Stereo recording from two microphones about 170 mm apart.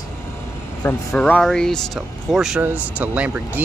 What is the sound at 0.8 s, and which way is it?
Speech, 10° left (ahead or behind).